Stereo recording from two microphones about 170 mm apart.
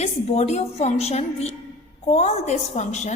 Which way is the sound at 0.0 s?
40° left (ahead or behind).